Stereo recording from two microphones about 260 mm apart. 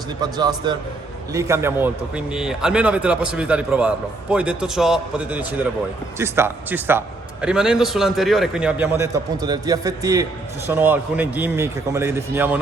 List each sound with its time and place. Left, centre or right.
0.2 s a man's voice: centre